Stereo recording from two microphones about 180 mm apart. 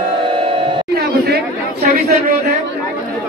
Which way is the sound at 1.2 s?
60° right (ahead or behind).